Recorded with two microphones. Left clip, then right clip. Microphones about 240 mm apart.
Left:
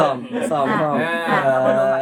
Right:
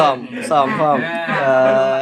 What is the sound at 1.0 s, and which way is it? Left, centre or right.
Music, left.